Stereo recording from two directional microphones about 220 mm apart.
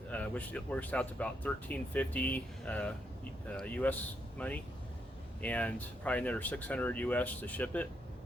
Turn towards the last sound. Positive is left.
turn(degrees=5)  # may be behind; listen again after turning